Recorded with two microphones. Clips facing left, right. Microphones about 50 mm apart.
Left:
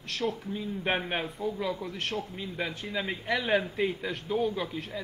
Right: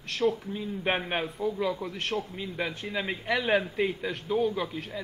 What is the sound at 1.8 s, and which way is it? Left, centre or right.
Speech, right.